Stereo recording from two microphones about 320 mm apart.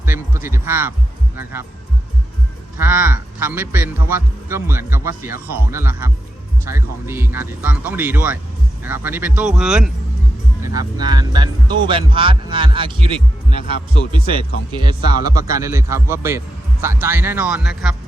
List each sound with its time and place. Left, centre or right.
0.0 s a man's voice: centre
2.7 s a man's voice: centre